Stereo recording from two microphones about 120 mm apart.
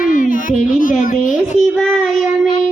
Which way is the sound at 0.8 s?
90° left.